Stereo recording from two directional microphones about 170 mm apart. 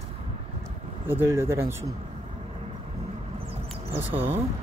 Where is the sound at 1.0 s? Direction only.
15° right (ahead or behind).